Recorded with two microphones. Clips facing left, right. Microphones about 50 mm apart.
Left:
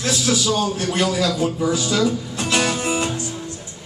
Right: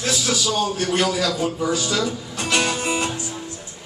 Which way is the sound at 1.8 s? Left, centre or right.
Centre.